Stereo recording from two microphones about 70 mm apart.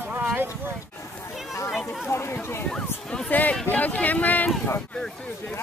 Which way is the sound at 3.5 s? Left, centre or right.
Centre.